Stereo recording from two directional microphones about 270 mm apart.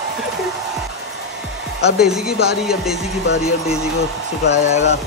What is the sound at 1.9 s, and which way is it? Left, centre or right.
A man's voice, centre.